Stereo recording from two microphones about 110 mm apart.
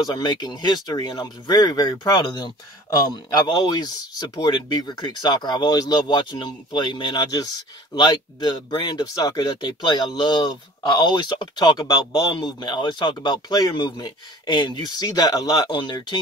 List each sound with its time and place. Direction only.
0.0 s speech: 40° left (ahead or behind)
15.7 s speech: 45° left (ahead or behind)